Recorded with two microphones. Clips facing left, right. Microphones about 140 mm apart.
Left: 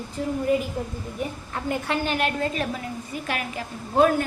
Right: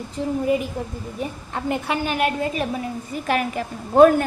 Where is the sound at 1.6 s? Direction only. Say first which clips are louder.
Right 2 dB; 15° right (ahead or behind).